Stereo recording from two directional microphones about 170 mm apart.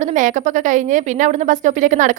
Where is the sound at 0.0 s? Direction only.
45° right (ahead or behind).